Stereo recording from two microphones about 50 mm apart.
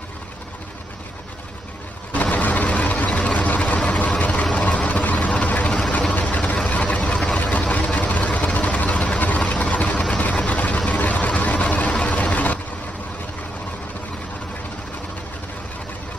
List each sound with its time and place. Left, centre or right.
2.1 s vehicle: left
10.1 s a sound: left
10.9 s vehicle: left